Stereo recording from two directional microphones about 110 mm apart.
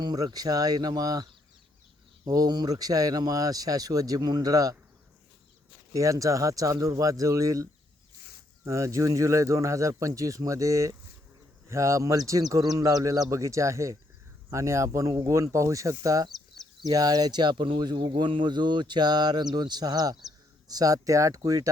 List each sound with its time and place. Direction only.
0.0 s speech: 40° right (ahead or behind)
5.9 s speech: 30° right (ahead or behind)